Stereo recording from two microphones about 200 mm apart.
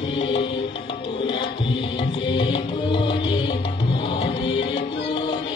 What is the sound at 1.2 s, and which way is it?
Tabla, 25° left (ahead or behind).